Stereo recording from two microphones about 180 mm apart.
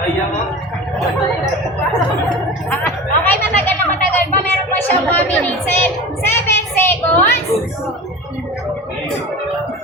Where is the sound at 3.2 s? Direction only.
10° left (ahead or behind).